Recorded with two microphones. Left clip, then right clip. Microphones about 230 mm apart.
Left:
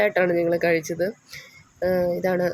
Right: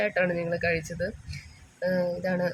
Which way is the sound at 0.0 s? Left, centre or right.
Centre.